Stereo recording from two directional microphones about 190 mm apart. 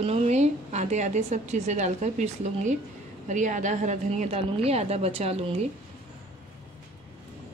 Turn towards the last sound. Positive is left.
turn(degrees=-30)  # may be behind; listen again after turning